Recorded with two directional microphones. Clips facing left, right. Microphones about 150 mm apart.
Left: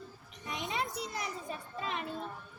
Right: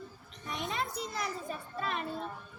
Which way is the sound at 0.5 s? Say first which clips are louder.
Right 1 dB; 15° left (ahead or behind).